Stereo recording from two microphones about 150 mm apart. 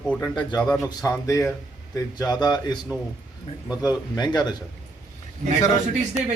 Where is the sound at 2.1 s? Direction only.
25° left (ahead or behind).